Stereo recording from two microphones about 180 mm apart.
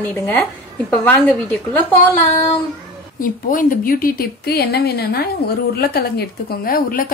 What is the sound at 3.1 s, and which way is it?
A woman's voice, 50° left (ahead or behind).